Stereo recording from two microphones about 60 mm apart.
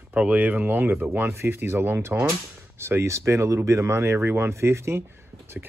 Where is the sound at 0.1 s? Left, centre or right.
Right.